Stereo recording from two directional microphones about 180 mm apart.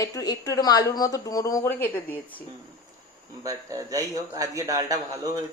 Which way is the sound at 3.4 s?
20° right (ahead or behind).